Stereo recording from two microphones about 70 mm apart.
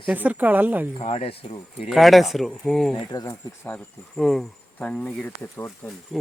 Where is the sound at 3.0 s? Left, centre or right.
Left.